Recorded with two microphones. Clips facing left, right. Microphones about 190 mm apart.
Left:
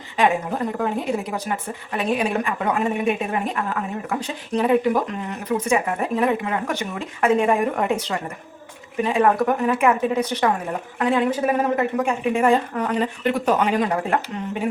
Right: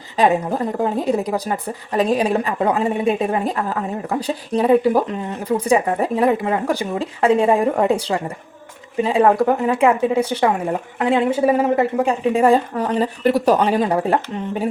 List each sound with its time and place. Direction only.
0.2 s a woman's voice: 35° right (ahead or behind)